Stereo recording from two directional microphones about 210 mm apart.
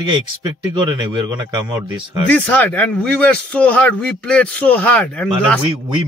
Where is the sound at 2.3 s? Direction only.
10° left (ahead or behind).